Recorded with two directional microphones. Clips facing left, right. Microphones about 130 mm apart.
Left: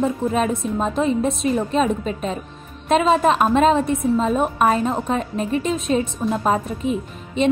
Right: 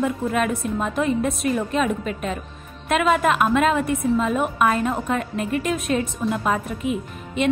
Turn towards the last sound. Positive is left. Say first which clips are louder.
# left 2 dB
turn(degrees=30)  # may be behind; listen again after turning